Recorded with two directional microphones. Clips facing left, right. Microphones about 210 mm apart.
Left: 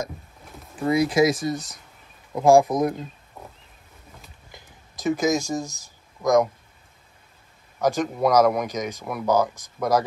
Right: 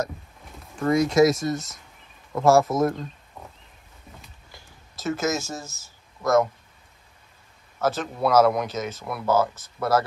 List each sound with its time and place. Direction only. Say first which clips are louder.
0.7 s speech: right 1 dB; 5° left (ahead or behind)
2.3 s speech: left 2 dB; 15° left (ahead or behind)
3.4 s wild animals: left 2 dB; 5° left (ahead or behind)
4.5 s a sound: left 2 dB; 15° left (ahead or behind)
7.8 s speech: left 3 dB; 15° left (ahead or behind)